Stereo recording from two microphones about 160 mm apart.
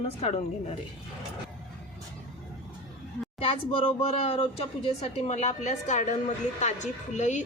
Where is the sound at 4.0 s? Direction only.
45° left (ahead or behind).